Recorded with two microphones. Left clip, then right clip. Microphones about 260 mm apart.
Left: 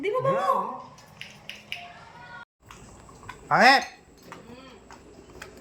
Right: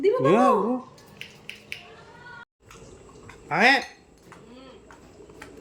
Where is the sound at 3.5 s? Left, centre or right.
Centre.